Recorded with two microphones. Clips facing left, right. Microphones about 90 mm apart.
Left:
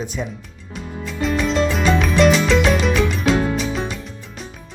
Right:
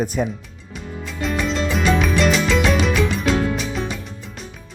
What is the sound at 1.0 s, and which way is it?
Music, centre (ahead or behind).